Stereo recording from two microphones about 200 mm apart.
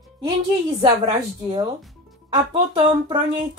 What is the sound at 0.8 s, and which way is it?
Speech, 25° right (ahead or behind).